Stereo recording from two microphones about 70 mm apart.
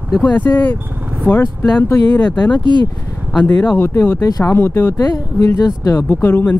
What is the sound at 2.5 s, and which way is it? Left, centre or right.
Speech, left.